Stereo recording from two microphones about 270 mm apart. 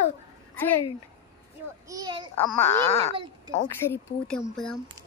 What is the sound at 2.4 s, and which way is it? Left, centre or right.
Speech, centre.